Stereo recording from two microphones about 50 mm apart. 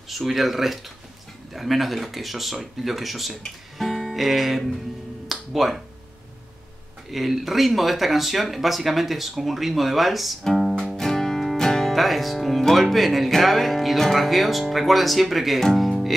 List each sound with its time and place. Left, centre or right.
0.1 s speech: centre
3.7 s music: centre
7.1 s speech: centre